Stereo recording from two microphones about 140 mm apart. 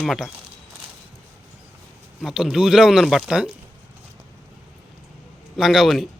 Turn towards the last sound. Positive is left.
turn(degrees=0)  # may be behind; listen again after turning